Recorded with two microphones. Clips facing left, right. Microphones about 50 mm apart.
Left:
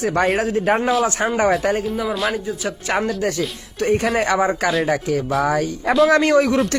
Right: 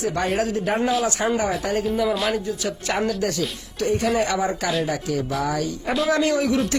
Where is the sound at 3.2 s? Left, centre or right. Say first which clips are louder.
Left 2 dB; left.